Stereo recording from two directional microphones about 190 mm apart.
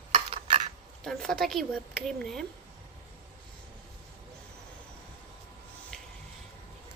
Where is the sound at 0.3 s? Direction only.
30° right (ahead or behind).